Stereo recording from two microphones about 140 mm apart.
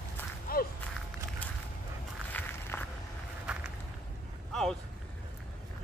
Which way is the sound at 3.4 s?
5° right (ahead or behind).